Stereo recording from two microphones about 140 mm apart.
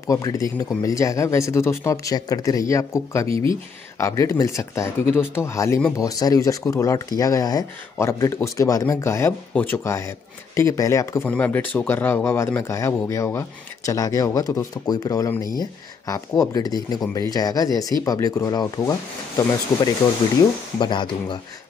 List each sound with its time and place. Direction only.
0.0 s speech: 25° left (ahead or behind)
11.2 s speech: 10° left (ahead or behind); by 21.4 s 35° left (ahead or behind)